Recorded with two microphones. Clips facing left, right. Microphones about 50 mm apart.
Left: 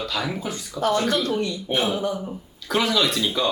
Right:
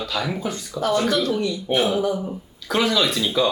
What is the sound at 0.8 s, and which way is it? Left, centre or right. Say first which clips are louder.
Speech: even; left.